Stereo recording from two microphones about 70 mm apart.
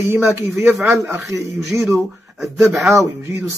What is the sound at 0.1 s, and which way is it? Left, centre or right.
Speech, right.